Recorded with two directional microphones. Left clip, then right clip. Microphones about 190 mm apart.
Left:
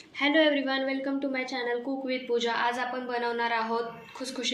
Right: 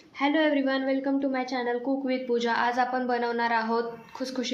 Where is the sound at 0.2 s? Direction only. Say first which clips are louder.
Left 1 dB; 55° right (ahead or behind).